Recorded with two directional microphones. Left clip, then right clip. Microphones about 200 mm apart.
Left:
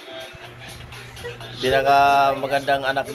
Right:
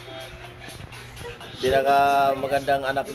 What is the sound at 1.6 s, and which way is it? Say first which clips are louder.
Speech: left 3 dB; 35° right (ahead or behind).